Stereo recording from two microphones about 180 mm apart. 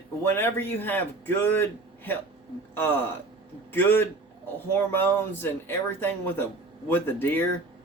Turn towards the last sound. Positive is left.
turn(degrees=10)  # may be behind; listen again after turning